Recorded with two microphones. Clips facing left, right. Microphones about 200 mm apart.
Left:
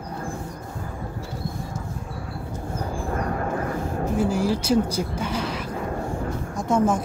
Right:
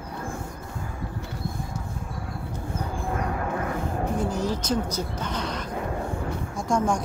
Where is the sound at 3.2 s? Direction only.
45° left (ahead or behind).